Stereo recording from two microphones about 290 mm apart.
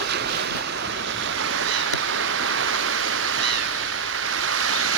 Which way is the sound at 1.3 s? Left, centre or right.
Right.